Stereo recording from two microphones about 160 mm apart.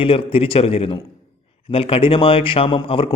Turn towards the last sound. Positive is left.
turn(degrees=35)  # may be behind; listen again after turning